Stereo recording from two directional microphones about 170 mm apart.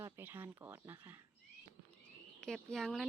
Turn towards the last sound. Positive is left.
turn(degrees=0)  # may be behind; listen again after turning